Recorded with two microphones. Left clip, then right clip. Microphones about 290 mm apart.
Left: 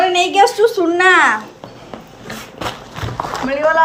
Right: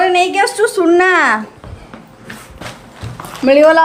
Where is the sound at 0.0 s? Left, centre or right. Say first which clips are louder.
Even; centre.